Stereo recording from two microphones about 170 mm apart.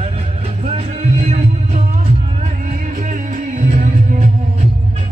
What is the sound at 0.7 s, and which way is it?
Music, 35° right (ahead or behind).